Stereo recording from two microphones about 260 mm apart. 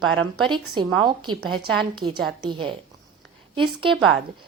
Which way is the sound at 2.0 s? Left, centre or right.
Right.